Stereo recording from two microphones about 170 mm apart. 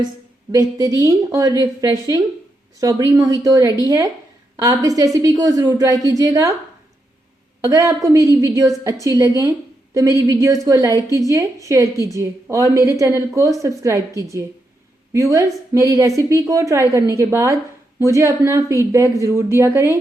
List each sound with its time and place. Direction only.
0.5 s a woman's voice: 20° right (ahead or behind)
7.6 s a woman's voice: 20° right (ahead or behind)
15.1 s a woman's voice: 15° right (ahead or behind)